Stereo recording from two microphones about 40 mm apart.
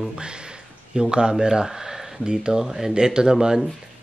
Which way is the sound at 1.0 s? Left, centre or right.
Right.